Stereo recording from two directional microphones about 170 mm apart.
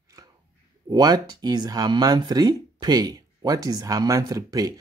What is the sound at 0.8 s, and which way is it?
Speech, 20° right (ahead or behind).